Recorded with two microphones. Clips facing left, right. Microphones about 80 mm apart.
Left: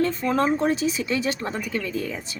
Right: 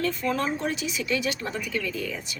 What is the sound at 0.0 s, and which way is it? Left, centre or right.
Speech, left.